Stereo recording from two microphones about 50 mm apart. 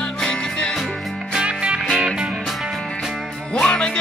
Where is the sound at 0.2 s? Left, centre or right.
Centre.